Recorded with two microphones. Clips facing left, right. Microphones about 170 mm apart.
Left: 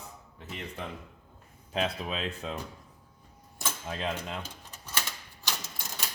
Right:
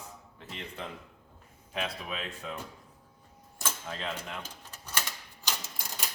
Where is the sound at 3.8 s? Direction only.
20° left (ahead or behind).